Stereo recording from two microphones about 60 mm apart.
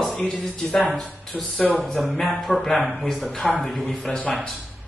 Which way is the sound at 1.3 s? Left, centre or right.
Left.